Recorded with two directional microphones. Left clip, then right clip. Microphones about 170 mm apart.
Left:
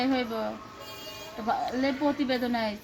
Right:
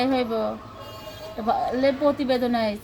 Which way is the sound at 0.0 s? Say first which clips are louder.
Right 5 dB; 35° right (ahead or behind).